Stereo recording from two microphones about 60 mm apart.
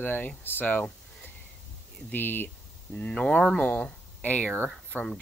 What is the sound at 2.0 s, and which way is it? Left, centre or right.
Speech, left.